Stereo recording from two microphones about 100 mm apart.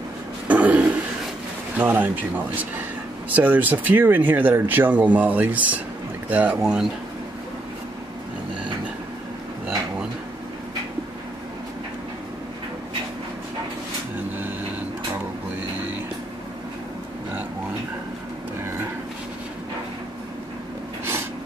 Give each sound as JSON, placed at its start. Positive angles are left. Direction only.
{"t": 0.5, "sound": "a sound", "side_deg": -15}
{"t": 1.8, "sound": "speech", "side_deg": -20}
{"t": 6.6, "sound": "speech", "side_deg": -5}